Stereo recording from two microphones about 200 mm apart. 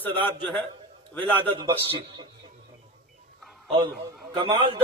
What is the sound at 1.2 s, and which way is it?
Speech, 10° left (ahead or behind).